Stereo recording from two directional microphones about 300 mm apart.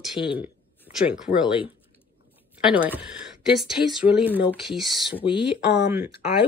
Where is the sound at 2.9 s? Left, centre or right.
Centre.